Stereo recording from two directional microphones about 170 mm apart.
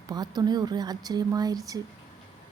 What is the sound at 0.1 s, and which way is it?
A woman's voice, 25° right (ahead or behind).